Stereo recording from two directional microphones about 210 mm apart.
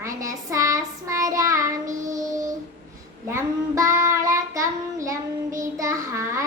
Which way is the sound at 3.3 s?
15° right (ahead or behind).